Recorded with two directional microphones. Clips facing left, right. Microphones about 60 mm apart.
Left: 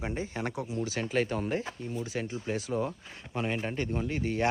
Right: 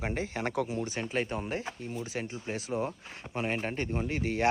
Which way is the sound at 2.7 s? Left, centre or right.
Right.